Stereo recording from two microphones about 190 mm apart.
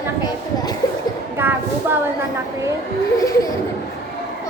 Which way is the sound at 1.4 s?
10° right (ahead or behind).